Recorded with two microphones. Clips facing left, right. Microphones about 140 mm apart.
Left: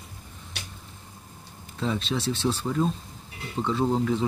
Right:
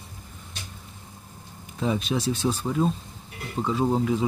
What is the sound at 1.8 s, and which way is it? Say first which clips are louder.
Speech: right 2 dB; 15° right (ahead or behind).